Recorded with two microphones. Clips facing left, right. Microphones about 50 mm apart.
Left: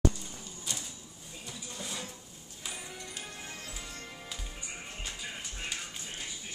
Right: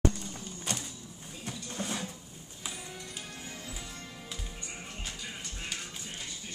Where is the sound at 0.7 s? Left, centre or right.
Right.